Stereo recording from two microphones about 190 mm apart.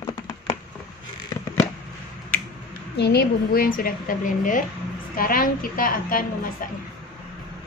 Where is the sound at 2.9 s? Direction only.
60° left (ahead or behind).